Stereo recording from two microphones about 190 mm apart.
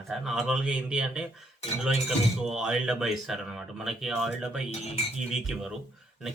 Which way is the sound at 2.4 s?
5° right (ahead or behind).